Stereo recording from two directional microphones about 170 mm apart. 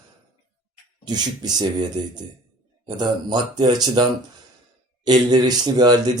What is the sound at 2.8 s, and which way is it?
Speech, 25° right (ahead or behind).